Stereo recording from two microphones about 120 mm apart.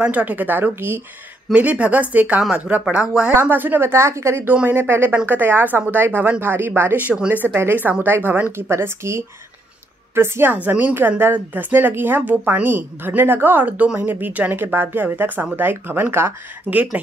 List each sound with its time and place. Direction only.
0.0 s a woman's voice: 10° right (ahead or behind)